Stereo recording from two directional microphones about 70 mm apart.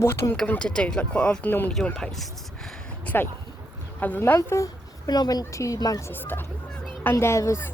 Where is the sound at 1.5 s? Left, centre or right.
Left.